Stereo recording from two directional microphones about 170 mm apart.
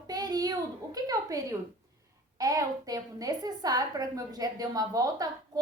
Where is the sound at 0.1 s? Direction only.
25° right (ahead or behind).